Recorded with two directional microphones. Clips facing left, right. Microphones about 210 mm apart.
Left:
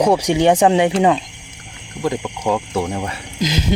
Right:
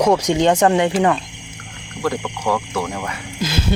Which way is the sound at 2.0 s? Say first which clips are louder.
Left 1 dB; 20° left (ahead or behind).